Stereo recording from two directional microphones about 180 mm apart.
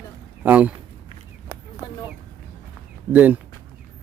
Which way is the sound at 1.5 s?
15° right (ahead or behind).